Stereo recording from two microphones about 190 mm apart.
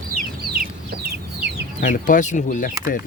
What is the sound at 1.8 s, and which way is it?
Speech, 45° left (ahead or behind).